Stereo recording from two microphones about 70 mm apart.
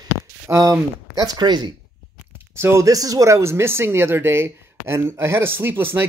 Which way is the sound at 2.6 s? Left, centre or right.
Right.